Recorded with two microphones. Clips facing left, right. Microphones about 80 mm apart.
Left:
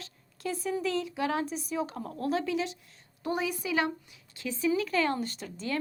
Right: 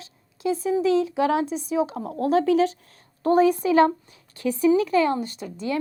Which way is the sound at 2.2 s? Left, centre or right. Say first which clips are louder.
Right 11 dB; right.